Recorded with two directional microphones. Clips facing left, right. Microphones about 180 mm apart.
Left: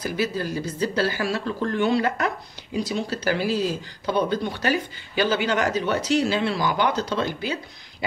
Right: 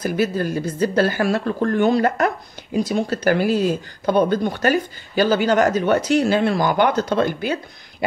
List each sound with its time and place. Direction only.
0.0 s speech: 50° right (ahead or behind)